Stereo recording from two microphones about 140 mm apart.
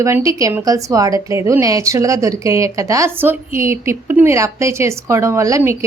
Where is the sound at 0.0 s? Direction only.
20° right (ahead or behind).